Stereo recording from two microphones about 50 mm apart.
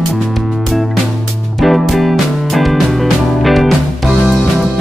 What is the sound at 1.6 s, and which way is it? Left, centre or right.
Music, centre.